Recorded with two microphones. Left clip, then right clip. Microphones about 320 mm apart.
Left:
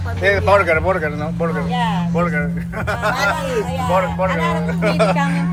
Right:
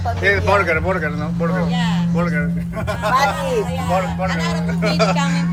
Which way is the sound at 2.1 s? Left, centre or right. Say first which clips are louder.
Left 2 dB; centre.